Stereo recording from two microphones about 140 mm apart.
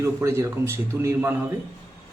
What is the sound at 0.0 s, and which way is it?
A man's voice, 20° right (ahead or behind).